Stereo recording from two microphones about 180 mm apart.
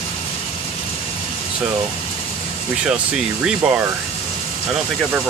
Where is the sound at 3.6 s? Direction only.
5° right (ahead or behind).